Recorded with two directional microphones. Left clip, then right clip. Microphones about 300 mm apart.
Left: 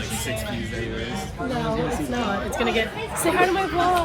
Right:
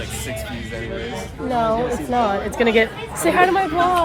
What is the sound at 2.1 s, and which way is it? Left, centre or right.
Speech, right.